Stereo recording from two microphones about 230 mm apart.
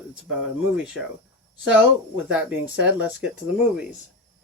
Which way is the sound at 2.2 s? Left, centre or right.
Centre.